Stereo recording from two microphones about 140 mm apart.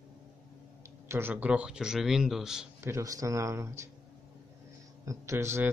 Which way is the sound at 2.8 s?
20° right (ahead or behind).